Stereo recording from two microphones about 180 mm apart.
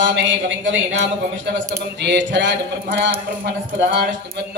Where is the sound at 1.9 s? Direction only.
75° right (ahead or behind).